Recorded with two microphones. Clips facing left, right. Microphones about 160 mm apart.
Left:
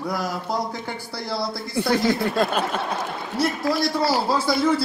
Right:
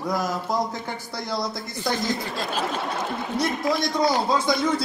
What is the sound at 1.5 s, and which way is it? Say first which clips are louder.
A woman's voice: left 5 dB; 65° left (ahead or behind).